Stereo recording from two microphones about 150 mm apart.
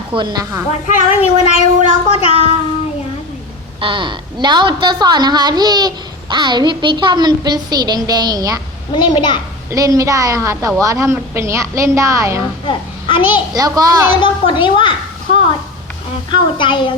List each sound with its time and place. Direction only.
0.1 s a woman's voice: 35° right (ahead or behind)
0.9 s child singing: 45° left (ahead or behind)
2.1 s a woman's voice: 40° left (ahead or behind)
3.8 s a woman's voice: 35° right (ahead or behind)
8.9 s a woman's voice: 30° left (ahead or behind)
9.6 s a woman's voice: 25° right (ahead or behind)
12.6 s a child's voice: 35° left (ahead or behind)
13.5 s a woman's voice: 25° right (ahead or behind)
14.1 s a woman's voice: 35° left (ahead or behind)